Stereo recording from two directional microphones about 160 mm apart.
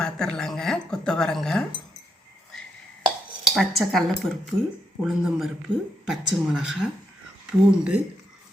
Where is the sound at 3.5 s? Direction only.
Centre (ahead or behind).